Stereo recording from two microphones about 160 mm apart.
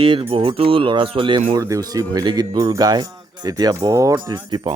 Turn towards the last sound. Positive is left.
turn(degrees=-25)  # may be behind; listen again after turning